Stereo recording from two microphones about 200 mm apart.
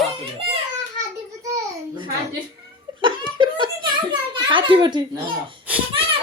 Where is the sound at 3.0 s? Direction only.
25° right (ahead or behind).